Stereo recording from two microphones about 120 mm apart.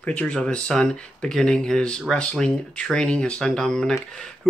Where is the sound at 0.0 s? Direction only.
10° left (ahead or behind).